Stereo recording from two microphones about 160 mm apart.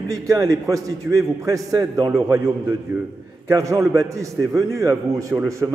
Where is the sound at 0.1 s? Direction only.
20° right (ahead or behind).